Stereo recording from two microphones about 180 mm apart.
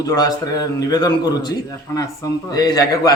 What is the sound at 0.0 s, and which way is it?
A man's voice, 20° left (ahead or behind).